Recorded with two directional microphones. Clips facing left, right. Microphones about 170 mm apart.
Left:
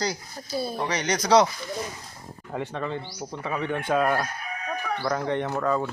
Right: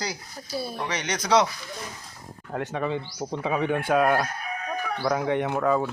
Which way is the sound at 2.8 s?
15° right (ahead or behind).